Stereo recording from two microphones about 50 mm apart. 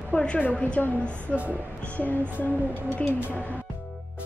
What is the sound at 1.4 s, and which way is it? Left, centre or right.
Speech, right.